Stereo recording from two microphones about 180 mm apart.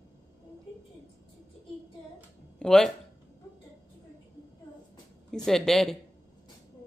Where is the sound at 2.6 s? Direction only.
5° left (ahead or behind).